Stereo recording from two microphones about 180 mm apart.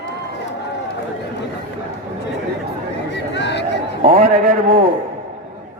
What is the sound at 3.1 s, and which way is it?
Chatter, 70° left (ahead or behind).